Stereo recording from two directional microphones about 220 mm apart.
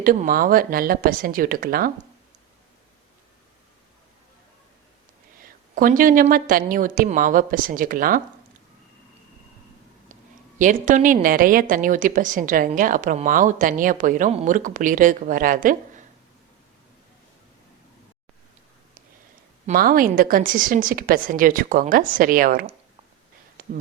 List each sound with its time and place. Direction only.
0.0 s a woman's voice: 40° right (ahead or behind)
5.4 s a woman's voice: 40° right (ahead or behind)
10.6 s a woman's voice: 35° right (ahead or behind)
19.6 s a woman's voice: 40° right (ahead or behind)